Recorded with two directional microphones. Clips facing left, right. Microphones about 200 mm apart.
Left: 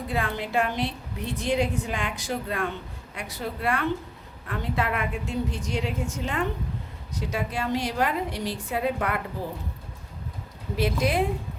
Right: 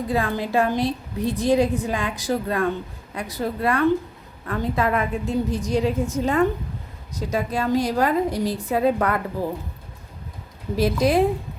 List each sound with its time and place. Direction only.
0.1 s a woman's voice: 35° right (ahead or behind)
10.8 s a woman's voice: 40° right (ahead or behind)